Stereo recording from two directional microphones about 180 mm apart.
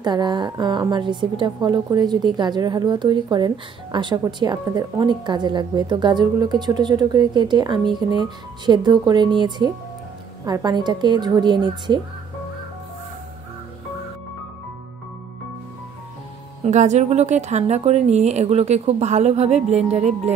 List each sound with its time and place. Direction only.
0.0 s a woman's voice: 25° right (ahead or behind)
16.6 s speech: 40° right (ahead or behind)